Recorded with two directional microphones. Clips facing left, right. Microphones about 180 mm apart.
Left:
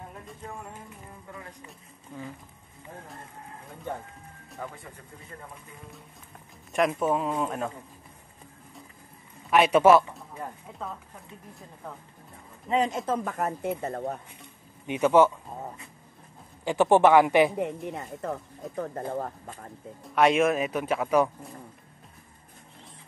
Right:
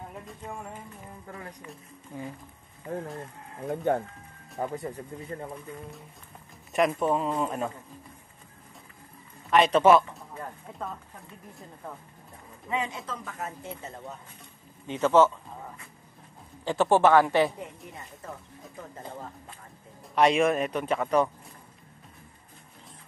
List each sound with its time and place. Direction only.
3.6 s speech: 70° right (ahead or behind)
4.6 s speech: 40° right (ahead or behind)
6.7 s speech: centre (ahead or behind)
9.5 s speech: 10° left (ahead or behind)
12.6 s speech: 35° left (ahead or behind)
13.0 s speech: 50° left (ahead or behind)
14.9 s speech: 15° left (ahead or behind)
16.6 s speech: 15° left (ahead or behind)
17.6 s speech: 70° left (ahead or behind); by 19.7 s 50° left (ahead or behind)
20.0 s speech: centre (ahead or behind)